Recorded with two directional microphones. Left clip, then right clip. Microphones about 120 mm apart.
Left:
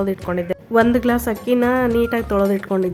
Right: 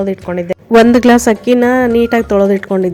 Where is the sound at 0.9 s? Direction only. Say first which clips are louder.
Right 10 dB; 60° right (ahead or behind).